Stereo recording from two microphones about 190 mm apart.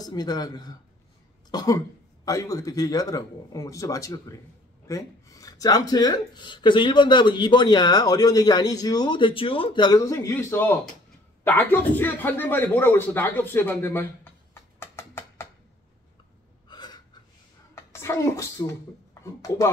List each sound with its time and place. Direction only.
0.0 s speech: 20° left (ahead or behind)
1.5 s cough: 20° left (ahead or behind)
2.2 s speech: 15° left (ahead or behind)
14.5 s a sound: 15° left (ahead or behind)
16.6 s gasp: 20° left (ahead or behind)
17.9 s a woman's voice: 15° left (ahead or behind)